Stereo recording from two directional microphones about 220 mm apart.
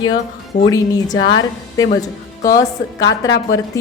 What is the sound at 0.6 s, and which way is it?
A woman's voice, 15° left (ahead or behind).